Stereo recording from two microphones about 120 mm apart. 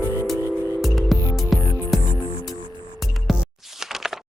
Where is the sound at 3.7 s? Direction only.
5° right (ahead or behind).